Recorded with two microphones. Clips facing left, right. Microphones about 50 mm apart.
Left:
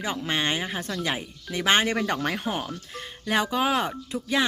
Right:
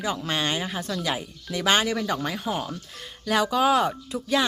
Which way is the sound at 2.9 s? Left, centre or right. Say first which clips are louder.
Right 1 dB; left.